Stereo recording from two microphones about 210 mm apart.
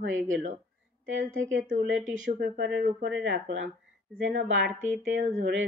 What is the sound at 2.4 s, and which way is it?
Speech, 50° right (ahead or behind).